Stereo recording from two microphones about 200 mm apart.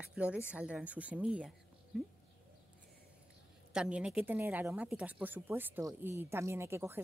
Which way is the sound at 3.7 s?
5° right (ahead or behind).